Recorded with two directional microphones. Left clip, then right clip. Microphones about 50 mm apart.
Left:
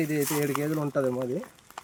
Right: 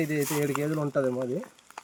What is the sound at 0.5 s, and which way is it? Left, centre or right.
Speech, left.